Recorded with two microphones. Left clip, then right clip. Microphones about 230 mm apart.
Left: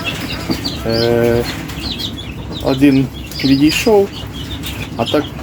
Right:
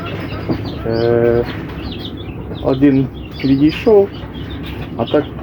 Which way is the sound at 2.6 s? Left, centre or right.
Centre.